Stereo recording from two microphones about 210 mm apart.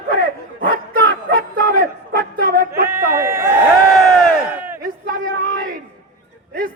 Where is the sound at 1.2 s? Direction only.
50° right (ahead or behind).